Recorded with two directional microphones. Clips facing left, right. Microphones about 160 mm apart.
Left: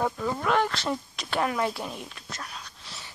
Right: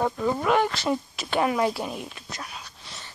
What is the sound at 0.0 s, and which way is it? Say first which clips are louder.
Speech: right 3 dB; 5° right (ahead or behind).